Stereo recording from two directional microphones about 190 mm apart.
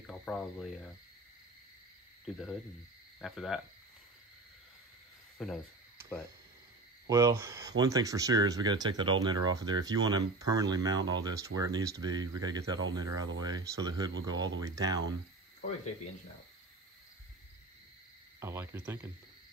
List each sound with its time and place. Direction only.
0.0 s a sound: 5° left (ahead or behind)
2.2 s speech: centre (ahead or behind)
5.4 s speech: centre (ahead or behind)
7.1 s speech: 15° right (ahead or behind)
18.4 s cricket: 15° right (ahead or behind)